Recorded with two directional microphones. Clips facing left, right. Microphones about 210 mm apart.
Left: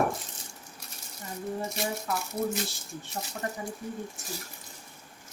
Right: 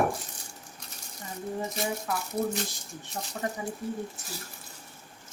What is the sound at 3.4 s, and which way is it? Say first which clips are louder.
Speech: right 3 dB; 15° right (ahead or behind).